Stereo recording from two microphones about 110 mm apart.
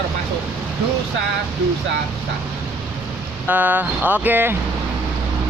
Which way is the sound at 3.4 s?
15° right (ahead or behind).